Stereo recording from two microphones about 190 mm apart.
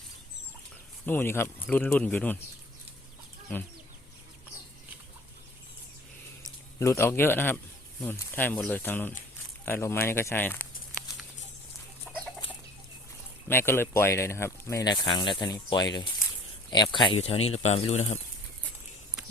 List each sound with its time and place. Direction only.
1.0 s speech: 10° left (ahead or behind)
6.7 s speech: 15° left (ahead or behind)
12.1 s chicken: 5° left (ahead or behind)
13.5 s speech: 10° left (ahead or behind); by 18.2 s 35° left (ahead or behind)